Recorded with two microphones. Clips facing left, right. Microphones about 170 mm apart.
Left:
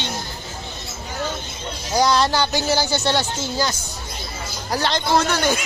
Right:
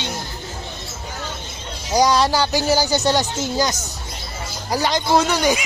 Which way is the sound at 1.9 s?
15° right (ahead or behind).